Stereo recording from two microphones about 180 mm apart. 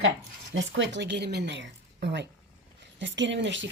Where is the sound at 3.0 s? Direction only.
90° right.